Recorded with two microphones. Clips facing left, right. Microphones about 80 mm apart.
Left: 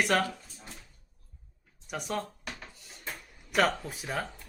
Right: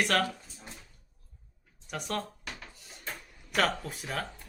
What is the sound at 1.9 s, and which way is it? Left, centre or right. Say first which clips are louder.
Speech: left 1 dB; centre.